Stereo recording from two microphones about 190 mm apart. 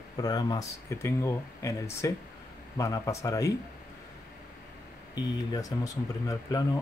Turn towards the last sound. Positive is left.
turn(degrees=20)  # may be behind; listen again after turning